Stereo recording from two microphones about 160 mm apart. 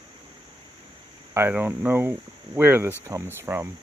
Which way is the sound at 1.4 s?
10° right (ahead or behind).